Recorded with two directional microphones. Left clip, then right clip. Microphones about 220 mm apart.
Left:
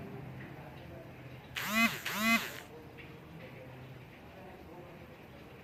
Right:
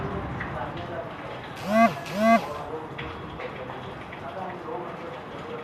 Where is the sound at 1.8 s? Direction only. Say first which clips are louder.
Right 10 dB; 15° right (ahead or behind).